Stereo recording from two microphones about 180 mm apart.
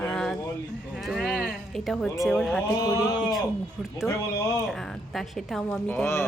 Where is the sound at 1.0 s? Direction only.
Centre (ahead or behind).